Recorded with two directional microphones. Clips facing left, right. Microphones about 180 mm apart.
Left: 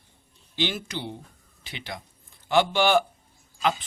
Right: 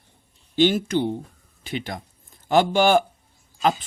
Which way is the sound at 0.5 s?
50° right (ahead or behind).